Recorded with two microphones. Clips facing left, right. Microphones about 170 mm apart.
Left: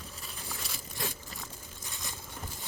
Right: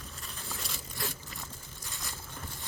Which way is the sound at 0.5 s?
20° left (ahead or behind).